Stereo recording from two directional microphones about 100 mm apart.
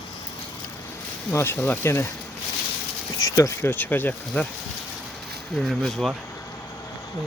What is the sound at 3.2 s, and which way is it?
Speech, 35° left (ahead or behind).